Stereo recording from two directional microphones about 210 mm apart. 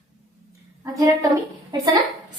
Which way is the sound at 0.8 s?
15° right (ahead or behind).